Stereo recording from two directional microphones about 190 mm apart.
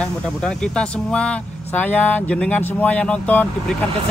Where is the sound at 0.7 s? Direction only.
5° left (ahead or behind).